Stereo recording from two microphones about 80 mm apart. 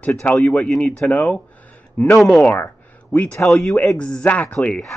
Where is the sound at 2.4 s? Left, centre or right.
Left.